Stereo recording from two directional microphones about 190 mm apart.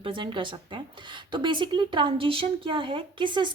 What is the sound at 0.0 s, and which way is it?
Speech, 25° right (ahead or behind).